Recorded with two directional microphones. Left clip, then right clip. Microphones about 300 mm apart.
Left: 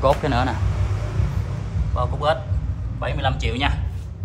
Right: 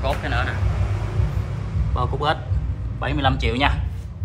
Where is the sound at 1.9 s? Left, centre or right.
Centre.